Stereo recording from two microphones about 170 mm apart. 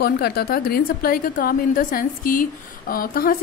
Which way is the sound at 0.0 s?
65° left (ahead or behind).